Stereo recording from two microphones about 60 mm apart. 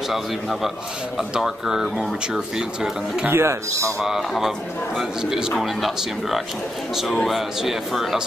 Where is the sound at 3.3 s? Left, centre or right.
Right.